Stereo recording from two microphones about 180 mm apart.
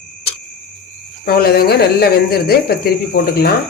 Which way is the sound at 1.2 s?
60° left (ahead or behind).